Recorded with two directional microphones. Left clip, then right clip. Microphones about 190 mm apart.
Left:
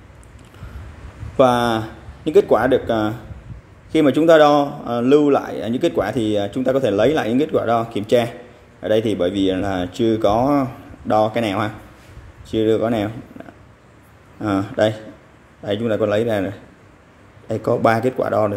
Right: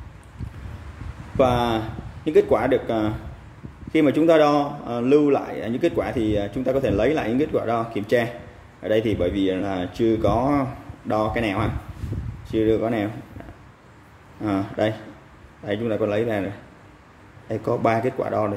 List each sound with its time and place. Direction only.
1.3 s a man's voice: 25° left (ahead or behind)
14.4 s a man's voice: 20° left (ahead or behind)
17.5 s a man's voice: 20° left (ahead or behind)